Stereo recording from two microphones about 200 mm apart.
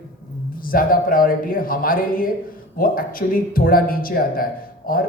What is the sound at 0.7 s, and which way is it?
Speech, 45° left (ahead or behind).